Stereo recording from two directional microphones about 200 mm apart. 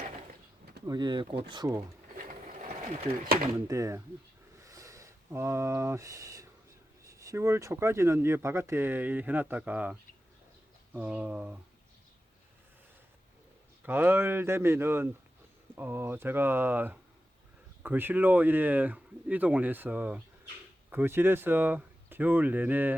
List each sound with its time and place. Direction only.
0.9 s speech: 20° right (ahead or behind)
2.1 s sewing machine: 40° right (ahead or behind)
3.7 s speech: 15° right (ahead or behind)
4.6 s a sound: 15° right (ahead or behind)
7.0 s speech: 15° right (ahead or behind)
13.8 s speech: 10° right (ahead or behind)